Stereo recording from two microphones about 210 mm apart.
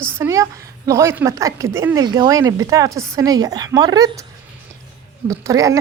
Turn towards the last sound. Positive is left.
turn(degrees=-15)  # may be behind; listen again after turning